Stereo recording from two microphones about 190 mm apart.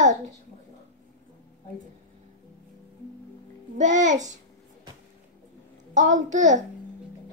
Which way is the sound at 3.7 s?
40° right (ahead or behind).